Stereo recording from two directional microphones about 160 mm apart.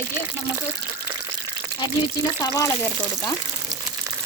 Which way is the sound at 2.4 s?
20° left (ahead or behind).